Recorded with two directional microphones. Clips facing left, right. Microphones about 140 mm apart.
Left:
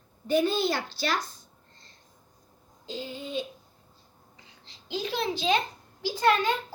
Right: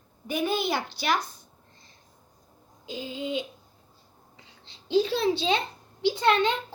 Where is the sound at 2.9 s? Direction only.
15° right (ahead or behind).